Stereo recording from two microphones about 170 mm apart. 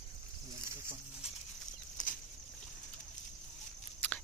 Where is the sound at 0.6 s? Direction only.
15° right (ahead or behind).